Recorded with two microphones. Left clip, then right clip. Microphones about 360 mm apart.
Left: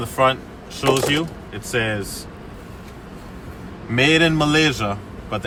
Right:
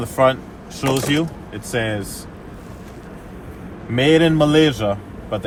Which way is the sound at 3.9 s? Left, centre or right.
Centre.